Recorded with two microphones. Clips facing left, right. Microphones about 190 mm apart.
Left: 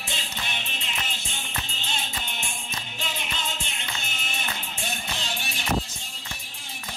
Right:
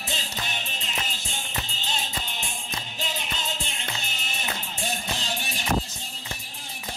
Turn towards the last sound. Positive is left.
turn(degrees=-35)  # may be behind; listen again after turning